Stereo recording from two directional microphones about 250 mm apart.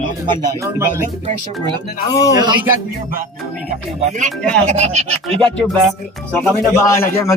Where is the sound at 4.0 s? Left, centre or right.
Right.